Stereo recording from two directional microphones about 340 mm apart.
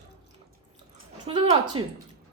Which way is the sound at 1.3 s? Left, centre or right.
Centre.